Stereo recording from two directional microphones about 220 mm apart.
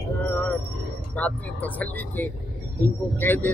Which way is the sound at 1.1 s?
5° left (ahead or behind).